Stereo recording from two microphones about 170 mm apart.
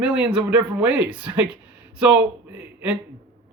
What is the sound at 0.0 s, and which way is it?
Speech, 5° right (ahead or behind).